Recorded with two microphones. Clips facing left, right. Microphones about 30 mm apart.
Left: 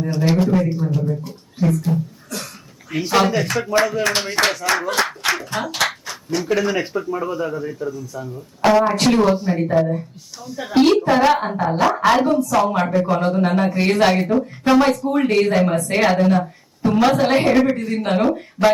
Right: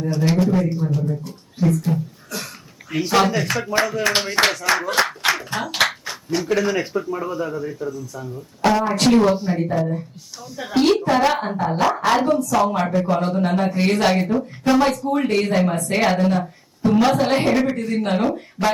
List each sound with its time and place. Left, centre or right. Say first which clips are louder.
0.0 s speech: left 1 dB; centre
1.9 s a sound: left 1 dB; centre
2.9 s speech: left 1 dB; centre
9.8 s a woman's voice: left 5 dB; left
10.4 s speech: left 3 dB; centre